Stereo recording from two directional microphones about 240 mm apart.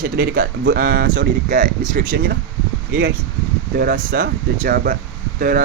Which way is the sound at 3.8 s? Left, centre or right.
Right.